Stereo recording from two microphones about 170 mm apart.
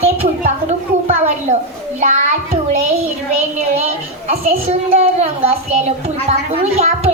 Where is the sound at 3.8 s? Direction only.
40° right (ahead or behind).